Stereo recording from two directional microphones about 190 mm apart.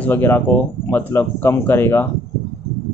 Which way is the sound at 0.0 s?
10° left (ahead or behind).